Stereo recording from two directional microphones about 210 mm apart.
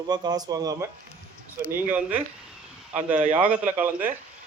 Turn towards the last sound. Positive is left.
turn(degrees=-10)  # may be behind; listen again after turning